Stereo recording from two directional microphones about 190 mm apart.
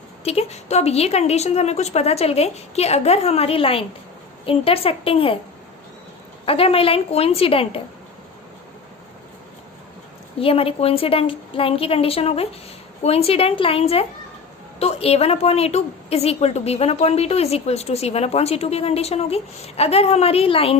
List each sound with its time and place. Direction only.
0.3 s a woman's voice: 35° left (ahead or behind)
6.4 s a woman's voice: 30° left (ahead or behind)
10.4 s a woman's voice: 30° left (ahead or behind)